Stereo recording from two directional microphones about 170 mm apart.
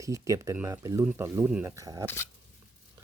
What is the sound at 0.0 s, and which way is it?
Speech, 20° right (ahead or behind).